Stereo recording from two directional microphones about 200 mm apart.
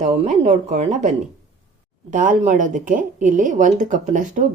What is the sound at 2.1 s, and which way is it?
A woman's voice, 40° right (ahead or behind).